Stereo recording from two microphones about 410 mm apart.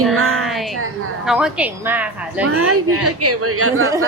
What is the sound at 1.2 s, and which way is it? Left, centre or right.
A woman's voice, centre.